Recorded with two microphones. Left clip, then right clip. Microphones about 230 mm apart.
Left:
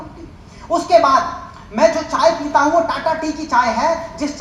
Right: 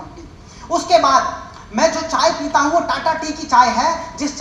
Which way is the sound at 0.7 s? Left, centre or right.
Right.